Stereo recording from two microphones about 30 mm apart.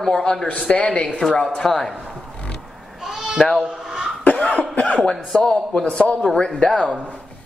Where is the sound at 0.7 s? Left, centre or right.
Left.